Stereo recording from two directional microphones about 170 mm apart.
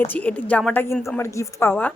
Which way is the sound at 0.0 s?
10° left (ahead or behind).